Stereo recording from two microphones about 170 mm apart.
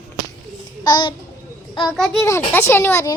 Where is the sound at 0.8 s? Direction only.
25° left (ahead or behind).